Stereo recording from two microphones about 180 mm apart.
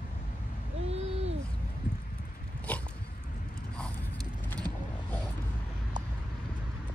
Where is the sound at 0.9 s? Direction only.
35° right (ahead or behind).